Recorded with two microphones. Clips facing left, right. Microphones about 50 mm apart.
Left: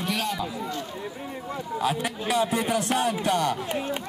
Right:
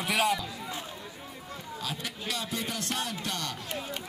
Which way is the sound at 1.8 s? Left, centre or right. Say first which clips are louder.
Left 10 dB; left.